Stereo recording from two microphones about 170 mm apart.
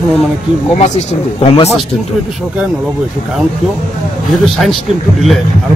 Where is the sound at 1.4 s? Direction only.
35° left (ahead or behind).